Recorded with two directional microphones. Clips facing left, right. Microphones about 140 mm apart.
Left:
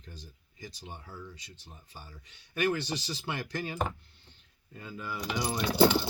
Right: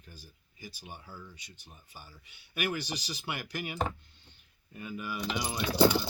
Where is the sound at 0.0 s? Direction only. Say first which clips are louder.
Left 3 dB; 10° right (ahead or behind).